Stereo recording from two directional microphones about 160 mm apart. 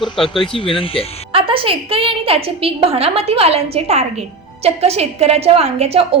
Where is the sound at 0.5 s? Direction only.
35° left (ahead or behind).